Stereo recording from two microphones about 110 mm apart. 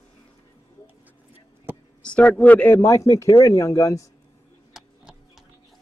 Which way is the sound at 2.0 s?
10° left (ahead or behind).